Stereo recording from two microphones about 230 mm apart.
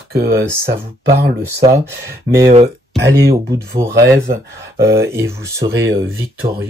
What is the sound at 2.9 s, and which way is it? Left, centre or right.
Speech, right.